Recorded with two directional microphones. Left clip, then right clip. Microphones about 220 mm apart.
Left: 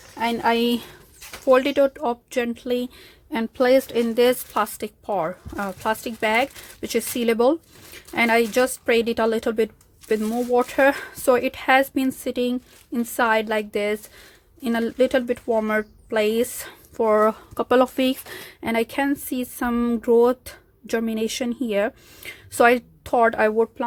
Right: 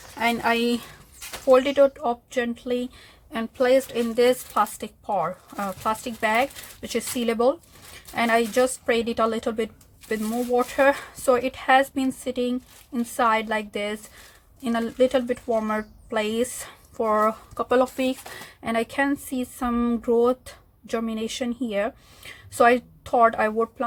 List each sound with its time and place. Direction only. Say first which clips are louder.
0.2 s speech: left 1 dB; 20° left (ahead or behind)
1.5 s speech: even; 35° left (ahead or behind)